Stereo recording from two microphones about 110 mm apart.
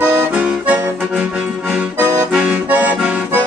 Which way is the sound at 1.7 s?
10° right (ahead or behind).